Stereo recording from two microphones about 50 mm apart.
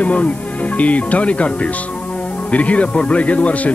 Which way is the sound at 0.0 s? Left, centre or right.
Left.